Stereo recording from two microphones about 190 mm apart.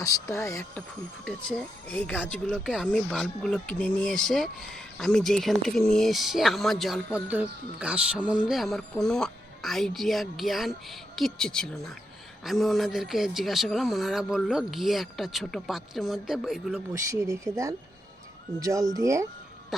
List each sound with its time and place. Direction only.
0.0 s speech: 15° left (ahead or behind)
1.2 s speech: 5° left (ahead or behind)
16.9 s speech: 15° right (ahead or behind)